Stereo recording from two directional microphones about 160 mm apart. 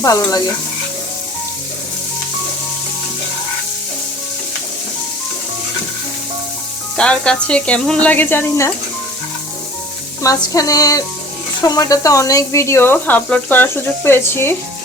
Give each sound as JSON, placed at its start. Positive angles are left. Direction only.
{"t": 0.0, "sound": "music", "side_deg": 20}
{"t": 6.9, "sound": "speech", "side_deg": 5}
{"t": 10.2, "sound": "music", "side_deg": 20}
{"t": 11.6, "sound": "speech", "side_deg": 25}